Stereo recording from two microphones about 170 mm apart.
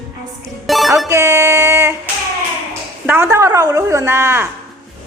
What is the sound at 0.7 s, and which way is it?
Music, centre (ahead or behind).